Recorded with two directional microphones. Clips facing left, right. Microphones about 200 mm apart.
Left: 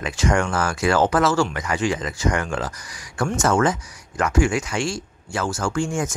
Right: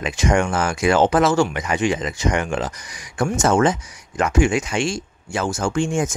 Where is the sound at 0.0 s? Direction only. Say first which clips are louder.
Right 2 dB; 20° right (ahead or behind).